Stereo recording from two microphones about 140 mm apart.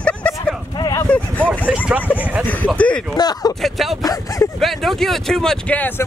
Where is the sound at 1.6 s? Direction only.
10° right (ahead or behind).